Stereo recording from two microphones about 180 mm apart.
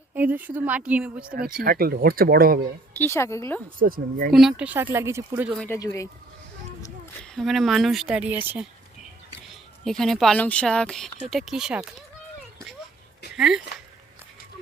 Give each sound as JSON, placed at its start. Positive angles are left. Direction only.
{"t": 0.1, "sound": "speech", "side_deg": -10}
{"t": 1.6, "sound": "speech", "side_deg": -55}
{"t": 3.0, "sound": "a woman's voice", "side_deg": 15}
{"t": 3.8, "sound": "speech", "side_deg": -50}
{"t": 4.3, "sound": "speech", "side_deg": 0}
{"t": 5.5, "sound": "a woman's voice", "side_deg": 15}
{"t": 7.3, "sound": "speech", "side_deg": 0}
{"t": 10.0, "sound": "speech", "side_deg": 0}
{"t": 13.3, "sound": "speech", "side_deg": -5}